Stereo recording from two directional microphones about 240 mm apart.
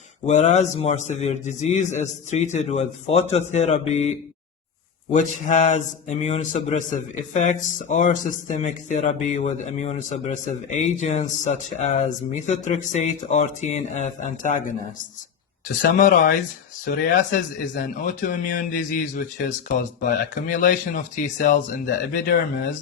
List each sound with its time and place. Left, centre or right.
0.3 s a man's voice: left
5.1 s a man's voice: left
15.8 s a man's voice: left
17.3 s a man's voice: left